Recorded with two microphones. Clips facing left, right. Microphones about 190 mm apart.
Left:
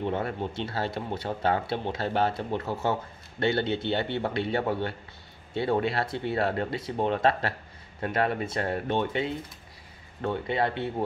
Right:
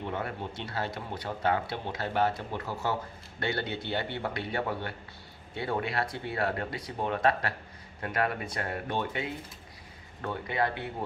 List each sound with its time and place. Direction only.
0.0 s speech: 30° left (ahead or behind)